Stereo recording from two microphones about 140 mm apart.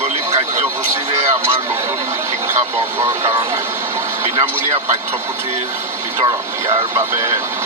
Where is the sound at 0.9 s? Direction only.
20° right (ahead or behind).